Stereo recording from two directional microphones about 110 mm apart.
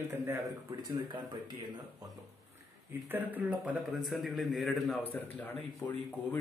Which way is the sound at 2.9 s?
15° right (ahead or behind).